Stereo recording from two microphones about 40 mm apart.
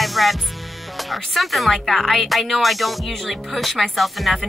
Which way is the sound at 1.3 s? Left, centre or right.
Centre.